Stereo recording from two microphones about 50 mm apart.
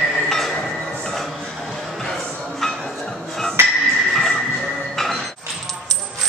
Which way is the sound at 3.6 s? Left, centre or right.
Right.